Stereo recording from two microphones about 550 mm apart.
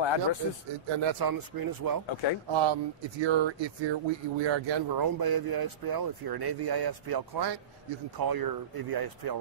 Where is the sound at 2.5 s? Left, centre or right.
Right.